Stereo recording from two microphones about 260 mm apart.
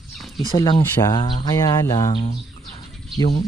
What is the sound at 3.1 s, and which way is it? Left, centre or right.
Speech, centre.